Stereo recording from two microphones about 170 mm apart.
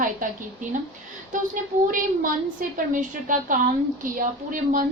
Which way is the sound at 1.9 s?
55° right (ahead or behind).